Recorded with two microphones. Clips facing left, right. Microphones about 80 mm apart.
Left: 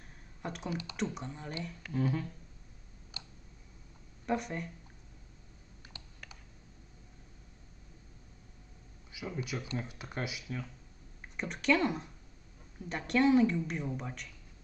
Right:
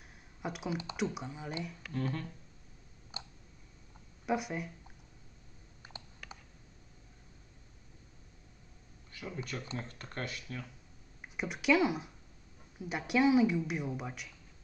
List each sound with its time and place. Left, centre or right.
0.4 s speech: centre
0.7 s speech: right
0.9 s speech: centre
2.0 s speech: centre
3.1 s a sound: right
4.3 s speech: centre
9.1 s speech: centre
11.3 s speech: centre